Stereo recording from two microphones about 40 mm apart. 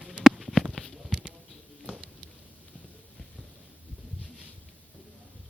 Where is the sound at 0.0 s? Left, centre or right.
Centre.